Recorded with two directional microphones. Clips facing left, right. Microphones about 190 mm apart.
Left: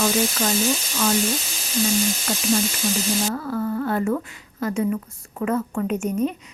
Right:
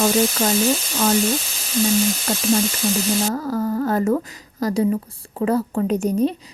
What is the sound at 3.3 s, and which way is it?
A woman's voice, 40° right (ahead or behind).